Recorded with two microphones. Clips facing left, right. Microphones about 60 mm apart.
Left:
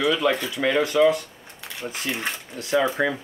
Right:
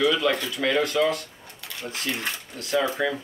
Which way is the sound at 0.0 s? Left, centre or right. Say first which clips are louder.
Left 1 dB; centre.